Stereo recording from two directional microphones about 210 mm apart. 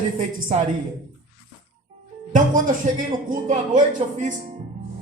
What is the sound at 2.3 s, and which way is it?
A man's voice, 40° right (ahead or behind).